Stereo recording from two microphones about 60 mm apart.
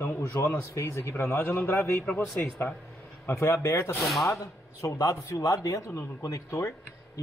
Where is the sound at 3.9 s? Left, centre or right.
Centre.